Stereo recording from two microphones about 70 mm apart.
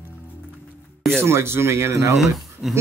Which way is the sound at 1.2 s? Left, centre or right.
Right.